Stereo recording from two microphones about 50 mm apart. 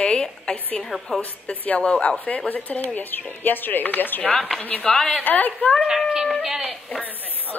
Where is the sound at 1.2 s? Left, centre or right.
Left.